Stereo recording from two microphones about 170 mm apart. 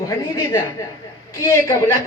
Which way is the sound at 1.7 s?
15° left (ahead or behind).